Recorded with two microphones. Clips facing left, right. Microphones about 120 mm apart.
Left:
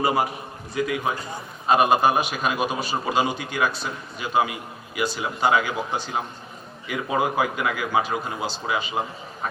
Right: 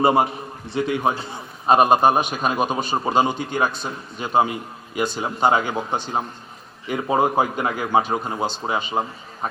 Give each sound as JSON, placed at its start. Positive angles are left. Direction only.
{"t": 0.0, "sound": "a man's voice", "side_deg": -30}